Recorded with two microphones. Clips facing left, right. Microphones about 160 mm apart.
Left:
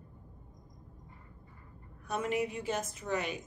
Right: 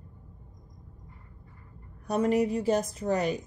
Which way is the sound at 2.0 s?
40° right (ahead or behind).